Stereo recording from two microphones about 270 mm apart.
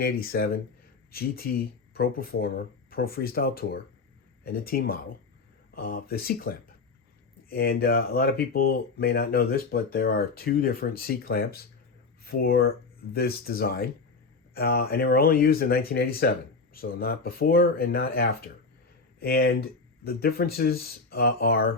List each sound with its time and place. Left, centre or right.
0.0 s speech: left